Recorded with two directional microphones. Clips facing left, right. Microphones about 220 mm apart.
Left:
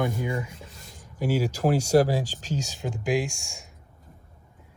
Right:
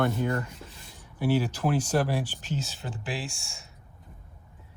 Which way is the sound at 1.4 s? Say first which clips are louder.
Left 3 dB; 10° left (ahead or behind).